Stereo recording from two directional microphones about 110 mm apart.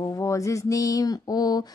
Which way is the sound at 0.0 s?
30° left (ahead or behind).